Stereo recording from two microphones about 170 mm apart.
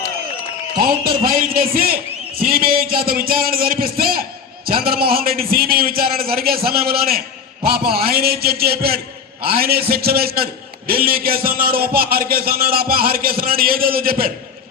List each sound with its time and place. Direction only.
0.8 s a man's voice: 60° right (ahead or behind)